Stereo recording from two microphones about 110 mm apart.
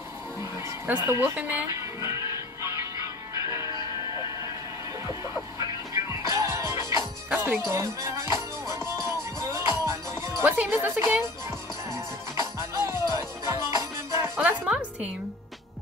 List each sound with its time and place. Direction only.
0.4 s speech: 25° right (ahead or behind)
2.0 s music: 25° right (ahead or behind)
7.2 s music: 15° right (ahead or behind)
10.4 s a woman's voice: 15° right (ahead or behind)
12.4 s music: 25° right (ahead or behind)
14.3 s music: 15° right (ahead or behind)